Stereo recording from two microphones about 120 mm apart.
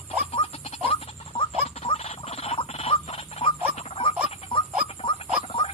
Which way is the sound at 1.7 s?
60° left (ahead or behind).